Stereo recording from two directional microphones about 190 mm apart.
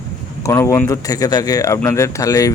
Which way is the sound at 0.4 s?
15° left (ahead or behind).